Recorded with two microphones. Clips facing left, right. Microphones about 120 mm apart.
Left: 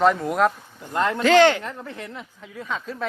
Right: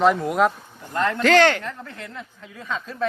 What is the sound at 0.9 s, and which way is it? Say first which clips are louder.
A woman's voice: left 1 dB; 15° left (ahead or behind).